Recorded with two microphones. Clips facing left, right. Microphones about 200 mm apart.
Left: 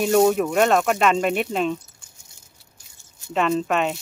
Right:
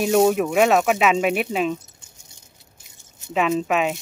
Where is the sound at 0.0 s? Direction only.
Centre (ahead or behind).